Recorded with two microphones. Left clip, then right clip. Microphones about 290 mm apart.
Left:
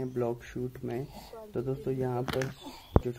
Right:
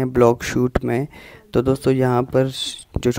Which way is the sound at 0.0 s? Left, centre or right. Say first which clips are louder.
Right 17 dB; right.